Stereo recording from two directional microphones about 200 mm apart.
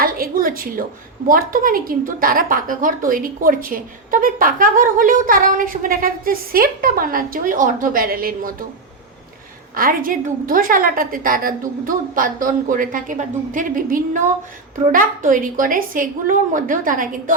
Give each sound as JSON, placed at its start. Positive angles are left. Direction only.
{"t": 0.0, "sound": "a sound", "side_deg": -45}
{"t": 1.3, "sound": "a woman's voice", "side_deg": -45}
{"t": 9.7, "sound": "a woman's voice", "side_deg": -45}